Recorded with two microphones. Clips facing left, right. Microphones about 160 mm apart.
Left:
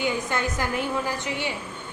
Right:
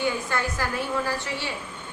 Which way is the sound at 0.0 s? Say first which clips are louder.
Left 1 dB; 20° left (ahead or behind).